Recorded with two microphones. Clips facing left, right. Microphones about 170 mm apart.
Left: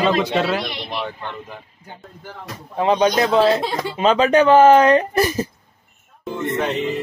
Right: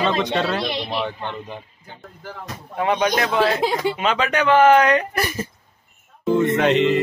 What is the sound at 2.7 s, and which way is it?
A man's voice, 30° left (ahead or behind).